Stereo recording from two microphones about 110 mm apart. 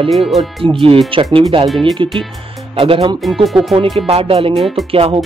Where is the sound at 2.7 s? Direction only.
55° right (ahead or behind).